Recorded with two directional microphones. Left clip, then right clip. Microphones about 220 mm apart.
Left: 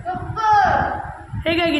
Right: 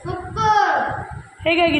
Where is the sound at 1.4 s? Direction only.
Centre (ahead or behind).